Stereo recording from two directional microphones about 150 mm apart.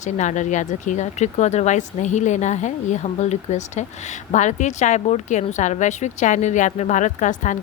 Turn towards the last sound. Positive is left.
turn(degrees=55)  # may be behind; listen again after turning